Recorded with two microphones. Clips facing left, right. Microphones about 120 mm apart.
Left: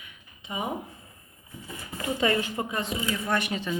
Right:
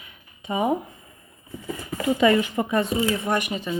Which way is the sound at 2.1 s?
75° right (ahead or behind).